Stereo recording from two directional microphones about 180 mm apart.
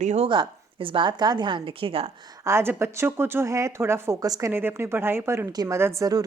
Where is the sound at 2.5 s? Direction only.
15° right (ahead or behind).